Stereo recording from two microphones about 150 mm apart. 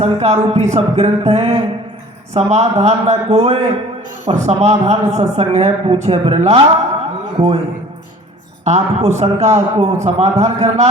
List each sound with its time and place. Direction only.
0.0 s a woman's voice: 45° right (ahead or behind)
8.6 s a woman's voice: 50° right (ahead or behind)